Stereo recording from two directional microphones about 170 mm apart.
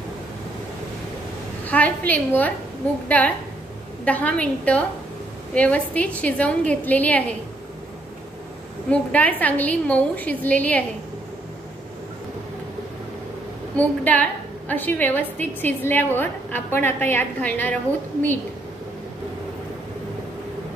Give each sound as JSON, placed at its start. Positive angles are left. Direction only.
{"t": 1.6, "sound": "a woman's voice", "side_deg": 10}
{"t": 8.9, "sound": "a woman's voice", "side_deg": 10}
{"t": 13.7, "sound": "a woman's voice", "side_deg": 10}